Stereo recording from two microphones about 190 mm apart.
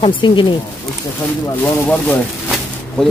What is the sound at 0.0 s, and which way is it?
Speech, 25° left (ahead or behind).